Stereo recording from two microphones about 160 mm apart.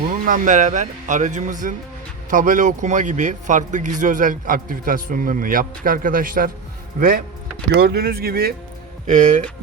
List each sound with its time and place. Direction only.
0.3 s a man's voice: 55° right (ahead or behind)
7.7 s speech: 90° right
9.0 s speech: 50° right (ahead or behind)